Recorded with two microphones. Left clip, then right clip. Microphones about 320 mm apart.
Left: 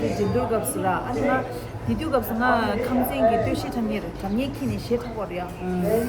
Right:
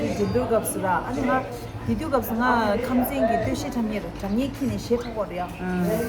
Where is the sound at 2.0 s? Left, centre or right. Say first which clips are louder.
Left 1 dB; centre.